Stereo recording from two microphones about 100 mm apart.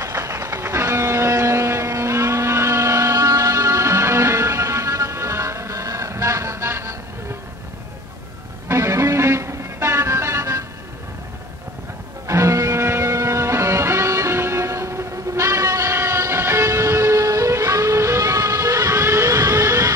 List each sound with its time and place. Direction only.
0.0 s a sound: 30° right (ahead or behind)
8.6 s music: 30° right (ahead or behind)
12.3 s music: 30° right (ahead or behind)